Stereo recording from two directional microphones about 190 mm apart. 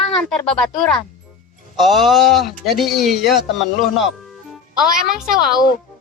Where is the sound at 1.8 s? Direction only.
Centre (ahead or behind).